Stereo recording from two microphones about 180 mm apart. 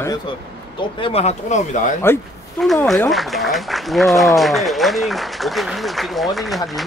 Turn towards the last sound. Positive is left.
turn(degrees=0)  # may be behind; listen again after turning